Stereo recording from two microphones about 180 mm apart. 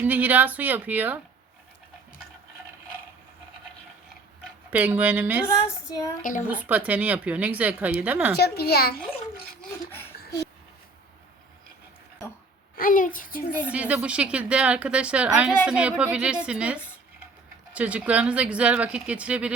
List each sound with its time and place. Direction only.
0.0 s a woman's voice: 10° right (ahead or behind)
4.7 s a woman's voice: 10° right (ahead or behind)
5.6 s child singing: 20° left (ahead or behind)
6.5 s a woman's voice: 10° right (ahead or behind)
8.4 s a woman's voice: 60° left (ahead or behind)
12.7 s a child's voice: 50° left (ahead or behind)
13.6 s a woman's voice: 5° right (ahead or behind)